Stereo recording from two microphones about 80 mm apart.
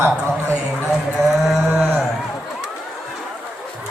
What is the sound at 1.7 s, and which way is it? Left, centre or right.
Speech, right.